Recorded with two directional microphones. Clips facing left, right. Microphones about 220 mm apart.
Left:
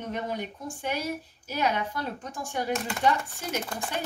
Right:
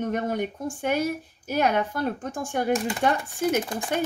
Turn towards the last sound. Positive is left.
turn(degrees=-50)  # may be behind; listen again after turning